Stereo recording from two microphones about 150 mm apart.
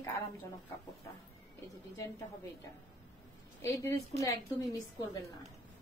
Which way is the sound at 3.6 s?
20° left (ahead or behind).